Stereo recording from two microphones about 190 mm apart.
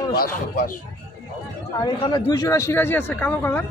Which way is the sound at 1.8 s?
20° left (ahead or behind).